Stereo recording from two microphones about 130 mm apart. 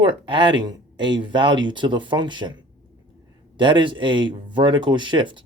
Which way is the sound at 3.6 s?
40° right (ahead or behind).